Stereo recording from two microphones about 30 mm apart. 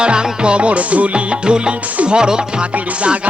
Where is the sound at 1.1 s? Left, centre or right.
Right.